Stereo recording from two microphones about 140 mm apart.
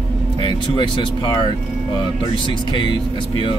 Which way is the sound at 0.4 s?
35° left (ahead or behind).